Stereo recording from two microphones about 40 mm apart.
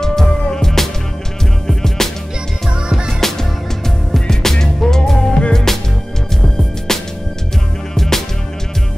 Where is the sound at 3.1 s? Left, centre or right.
Centre.